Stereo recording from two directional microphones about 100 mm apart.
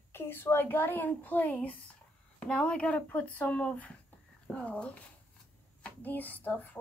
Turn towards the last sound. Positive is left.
turn(degrees=15)  # may be behind; listen again after turning